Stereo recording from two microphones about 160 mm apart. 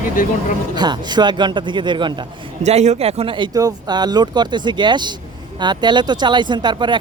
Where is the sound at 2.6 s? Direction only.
45° right (ahead or behind); by 7.0 s 30° right (ahead or behind).